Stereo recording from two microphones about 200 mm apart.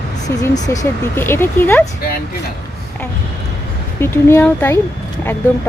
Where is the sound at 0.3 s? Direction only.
15° left (ahead or behind).